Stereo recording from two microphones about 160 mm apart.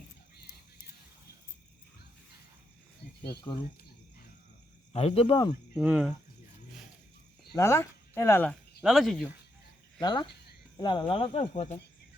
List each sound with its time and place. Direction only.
3.5 s speech: 30° left (ahead or behind)
4.9 s speech: 40° left (ahead or behind)
5.7 s speech: 5° right (ahead or behind)
7.5 s speech: 15° left (ahead or behind)
8.8 s speech: centre (ahead or behind)
10.0 s speech: 30° left (ahead or behind)